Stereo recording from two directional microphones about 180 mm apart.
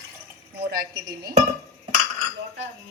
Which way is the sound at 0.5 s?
65° right (ahead or behind).